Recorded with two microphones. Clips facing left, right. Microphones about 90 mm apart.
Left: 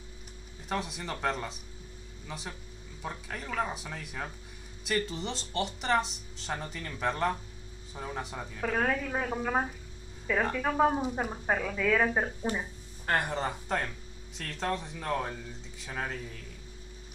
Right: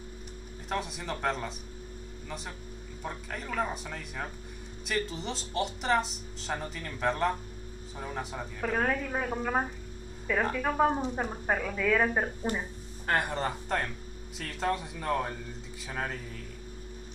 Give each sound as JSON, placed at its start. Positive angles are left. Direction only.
{"t": 0.7, "sound": "speech", "side_deg": 0}